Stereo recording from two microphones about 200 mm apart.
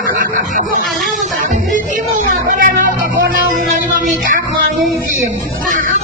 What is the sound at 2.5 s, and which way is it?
Music, 45° right (ahead or behind).